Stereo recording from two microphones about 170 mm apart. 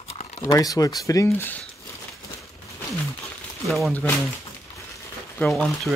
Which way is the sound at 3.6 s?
Centre (ahead or behind).